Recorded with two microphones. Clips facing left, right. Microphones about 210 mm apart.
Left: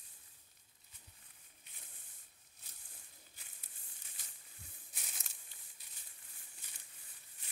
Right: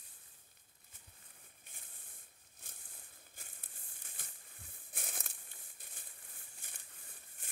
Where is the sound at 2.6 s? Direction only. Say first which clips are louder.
Right 6 dB; 50° right (ahead or behind).